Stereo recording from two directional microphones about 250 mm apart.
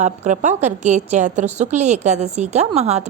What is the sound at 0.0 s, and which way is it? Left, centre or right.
A woman's voice, right.